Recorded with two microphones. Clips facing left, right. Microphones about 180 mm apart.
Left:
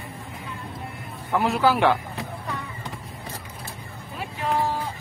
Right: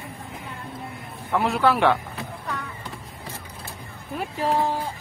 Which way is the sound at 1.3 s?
Centre (ahead or behind).